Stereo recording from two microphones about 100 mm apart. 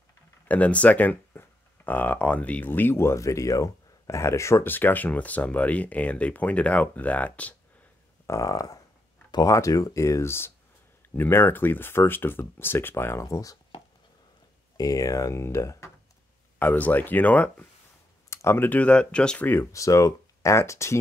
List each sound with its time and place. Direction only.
0.5 s speech: 15° left (ahead or behind)
8.3 s speech: 35° left (ahead or behind)
14.8 s speech: 35° left (ahead or behind)
16.5 s speech: 15° left (ahead or behind)
18.3 s speech: 25° left (ahead or behind)